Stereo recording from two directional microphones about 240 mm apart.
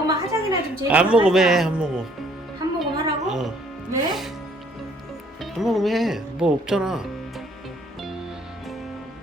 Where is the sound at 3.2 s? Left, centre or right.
Centre.